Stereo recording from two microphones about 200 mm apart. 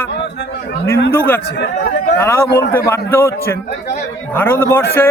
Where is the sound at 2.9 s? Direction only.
15° left (ahead or behind).